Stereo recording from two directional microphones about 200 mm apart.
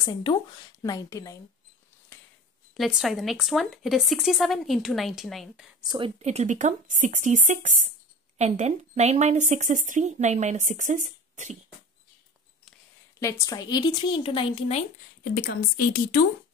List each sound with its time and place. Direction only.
0.0 s a woman's voice: 20° left (ahead or behind)
2.7 s speech: centre (ahead or behind)
5.8 s speech: 25° right (ahead or behind)
13.2 s a woman's voice: 15° left (ahead or behind)
15.3 s speech: 45° left (ahead or behind)